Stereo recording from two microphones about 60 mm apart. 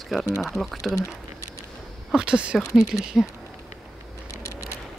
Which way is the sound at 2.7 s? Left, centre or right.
Left.